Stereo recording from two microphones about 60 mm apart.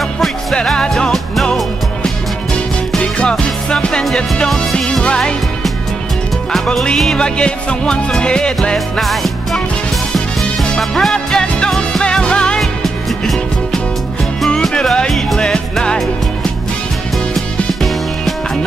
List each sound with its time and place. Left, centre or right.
0.7 s music: centre
3.0 s music: centre
6.5 s music: centre
9.0 s music: centre
10.6 s music: centre
12.0 s music: centre
12.5 s music: centre
14.5 s music: centre
15.5 s music: centre